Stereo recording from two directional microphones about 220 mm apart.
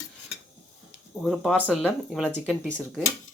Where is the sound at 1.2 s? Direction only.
Centre (ahead or behind).